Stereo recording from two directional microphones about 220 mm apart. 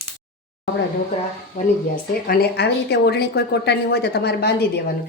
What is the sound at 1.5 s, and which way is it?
Speech, 35° left (ahead or behind).